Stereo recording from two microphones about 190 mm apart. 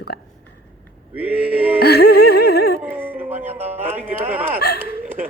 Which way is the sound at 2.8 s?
10° right (ahead or behind).